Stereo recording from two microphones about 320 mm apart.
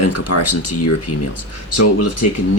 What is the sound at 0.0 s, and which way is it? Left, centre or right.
Speech, left.